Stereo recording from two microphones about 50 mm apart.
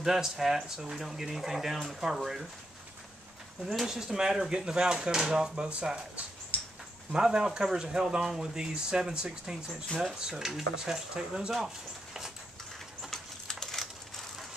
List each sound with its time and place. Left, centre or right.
0.0 s speech: centre
3.6 s speech: centre
6.5 s a sound: left
7.1 s speech: centre
13.5 s crushing: centre